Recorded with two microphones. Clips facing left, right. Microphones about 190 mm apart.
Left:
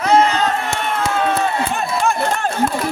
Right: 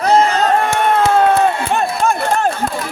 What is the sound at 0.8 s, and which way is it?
Run, 55° right (ahead or behind).